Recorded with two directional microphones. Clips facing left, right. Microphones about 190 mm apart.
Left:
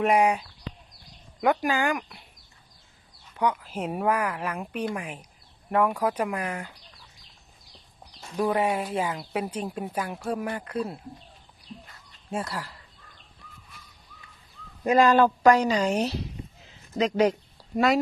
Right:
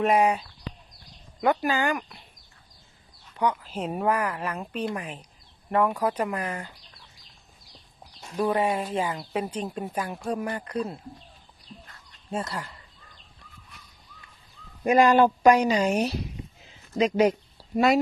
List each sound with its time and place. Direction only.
0.0 s speech: 10° left (ahead or behind)
3.3 s speech: 10° left (ahead or behind)
8.4 s speech: 10° left (ahead or behind)
12.5 s speech: centre (ahead or behind)
14.8 s speech: 15° right (ahead or behind)
17.6 s a sound: 5° right (ahead or behind)